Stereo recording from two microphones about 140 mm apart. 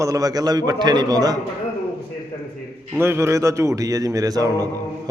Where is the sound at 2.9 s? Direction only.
15° right (ahead or behind).